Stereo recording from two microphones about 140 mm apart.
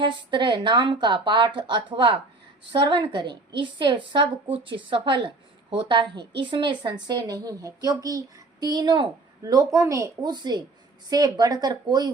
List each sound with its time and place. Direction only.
0.0 s a woman's voice: 35° right (ahead or behind)